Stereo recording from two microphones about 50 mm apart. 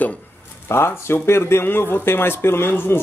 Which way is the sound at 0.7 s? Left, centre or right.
Left.